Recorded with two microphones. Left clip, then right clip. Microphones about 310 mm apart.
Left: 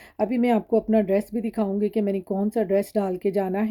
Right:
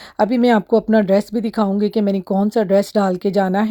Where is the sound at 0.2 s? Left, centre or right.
Centre.